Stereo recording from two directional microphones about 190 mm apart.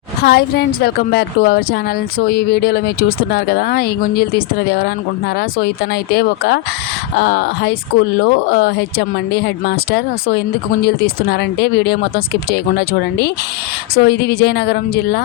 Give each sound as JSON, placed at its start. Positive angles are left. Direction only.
{"t": 0.2, "sound": "a woman's voice", "side_deg": 55}